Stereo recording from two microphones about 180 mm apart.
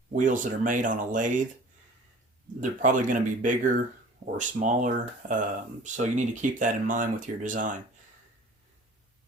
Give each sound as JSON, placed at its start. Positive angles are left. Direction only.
{"t": 0.1, "sound": "speech", "side_deg": -45}
{"t": 2.6, "sound": "speech", "side_deg": -45}